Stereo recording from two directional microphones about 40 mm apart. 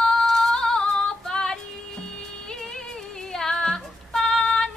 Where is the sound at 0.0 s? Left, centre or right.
Centre.